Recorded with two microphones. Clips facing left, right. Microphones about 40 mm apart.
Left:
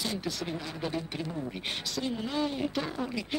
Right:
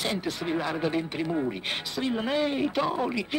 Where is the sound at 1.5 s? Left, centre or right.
Right.